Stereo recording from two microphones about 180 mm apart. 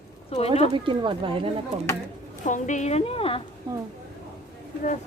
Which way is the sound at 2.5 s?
45° left (ahead or behind).